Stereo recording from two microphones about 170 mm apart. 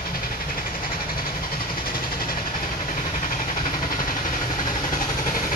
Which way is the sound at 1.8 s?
60° left (ahead or behind).